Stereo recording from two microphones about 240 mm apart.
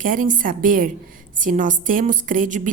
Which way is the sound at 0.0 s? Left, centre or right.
Right.